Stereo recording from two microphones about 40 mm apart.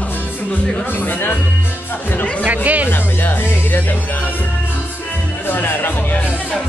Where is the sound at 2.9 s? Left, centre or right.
Left.